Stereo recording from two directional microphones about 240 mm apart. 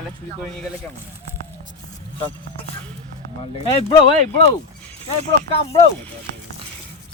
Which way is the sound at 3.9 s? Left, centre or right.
Left.